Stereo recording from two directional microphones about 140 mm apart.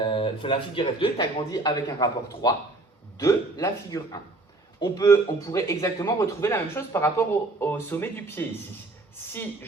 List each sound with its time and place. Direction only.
0.0 s a man's voice: 35° left (ahead or behind); by 8.4 s 15° left (ahead or behind)